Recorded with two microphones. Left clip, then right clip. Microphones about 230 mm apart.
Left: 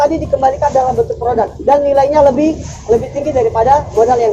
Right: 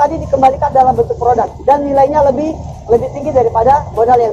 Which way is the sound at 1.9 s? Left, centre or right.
Left.